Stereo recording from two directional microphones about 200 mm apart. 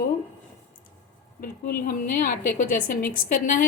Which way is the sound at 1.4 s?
45° left (ahead or behind).